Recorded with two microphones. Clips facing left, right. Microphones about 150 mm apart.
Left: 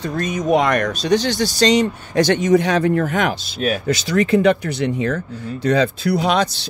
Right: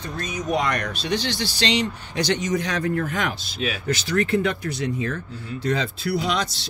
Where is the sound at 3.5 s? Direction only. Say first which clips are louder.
Left 7 dB; 45° left (ahead or behind).